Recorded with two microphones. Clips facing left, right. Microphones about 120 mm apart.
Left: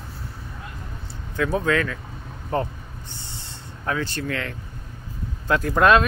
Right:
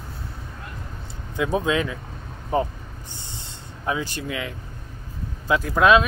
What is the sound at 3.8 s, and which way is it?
Speech, 15° right (ahead or behind).